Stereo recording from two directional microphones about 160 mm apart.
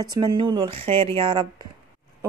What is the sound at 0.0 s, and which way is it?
A woman's voice, 25° right (ahead or behind).